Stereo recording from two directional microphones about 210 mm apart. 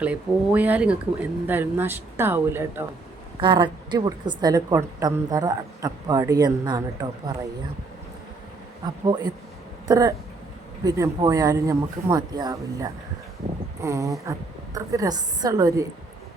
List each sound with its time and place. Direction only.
0.0 s a woman's voice: 5° right (ahead or behind)
3.4 s a woman's voice: 20° right (ahead or behind)
9.8 s a woman's voice: 15° right (ahead or behind)